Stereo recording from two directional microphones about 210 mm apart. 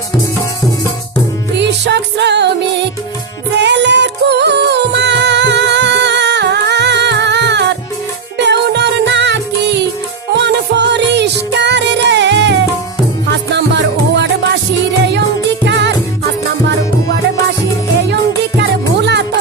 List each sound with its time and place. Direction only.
1.5 s music: 55° right (ahead or behind)
3.6 s music: 55° right (ahead or behind)
15.6 s music: 55° right (ahead or behind)
18.1 s music: 55° right (ahead or behind)